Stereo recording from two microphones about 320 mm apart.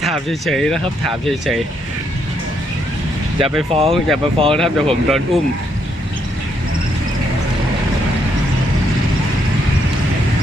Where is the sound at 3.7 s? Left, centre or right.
Centre.